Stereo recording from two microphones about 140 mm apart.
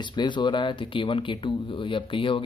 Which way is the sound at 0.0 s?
35° left (ahead or behind).